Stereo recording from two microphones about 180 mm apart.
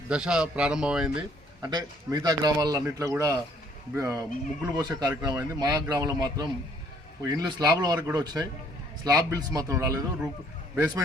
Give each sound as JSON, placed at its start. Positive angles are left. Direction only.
{"t": 0.1, "sound": "a man's voice", "side_deg": -5}
{"t": 1.6, "sound": "a man's voice", "side_deg": -20}